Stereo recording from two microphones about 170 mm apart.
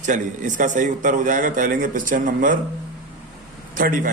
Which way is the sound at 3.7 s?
55° right (ahead or behind).